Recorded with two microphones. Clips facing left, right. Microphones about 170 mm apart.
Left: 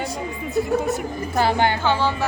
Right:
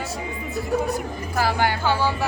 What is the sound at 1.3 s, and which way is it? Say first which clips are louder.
Speech: left 3 dB; 25° left (ahead or behind).